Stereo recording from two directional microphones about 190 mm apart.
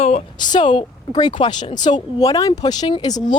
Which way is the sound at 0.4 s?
25° left (ahead or behind).